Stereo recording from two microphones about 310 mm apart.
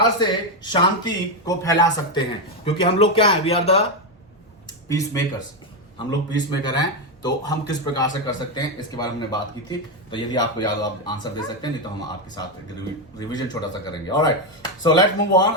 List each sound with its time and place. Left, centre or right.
0.2 s speech: centre
6.1 s speech: centre
13.1 s speech: centre